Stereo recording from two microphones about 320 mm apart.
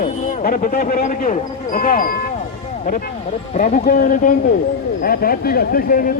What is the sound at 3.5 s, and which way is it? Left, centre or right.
Speech, left.